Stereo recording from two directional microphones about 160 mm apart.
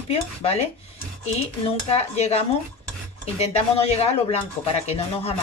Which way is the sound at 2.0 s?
40° left (ahead or behind).